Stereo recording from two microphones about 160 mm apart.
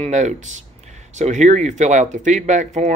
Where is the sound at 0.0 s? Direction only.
45° right (ahead or behind).